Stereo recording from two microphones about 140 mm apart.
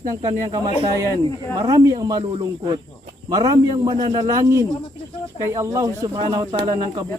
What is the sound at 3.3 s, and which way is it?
Speech, 30° right (ahead or behind).